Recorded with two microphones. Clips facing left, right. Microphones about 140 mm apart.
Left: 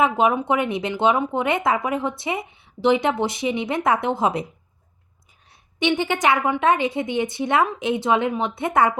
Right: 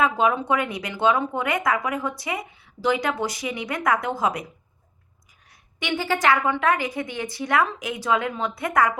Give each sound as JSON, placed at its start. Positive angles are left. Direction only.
{"t": 0.0, "sound": "speech", "side_deg": 20}
{"t": 5.9, "sound": "speech", "side_deg": 20}